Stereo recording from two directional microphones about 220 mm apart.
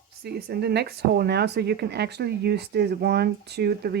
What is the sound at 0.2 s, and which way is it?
Speech, 45° right (ahead or behind).